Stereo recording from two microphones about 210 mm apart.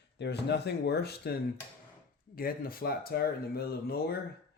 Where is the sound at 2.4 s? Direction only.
45° left (ahead or behind).